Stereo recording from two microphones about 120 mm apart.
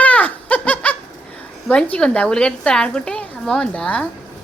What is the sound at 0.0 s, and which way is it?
Laughter, 15° left (ahead or behind).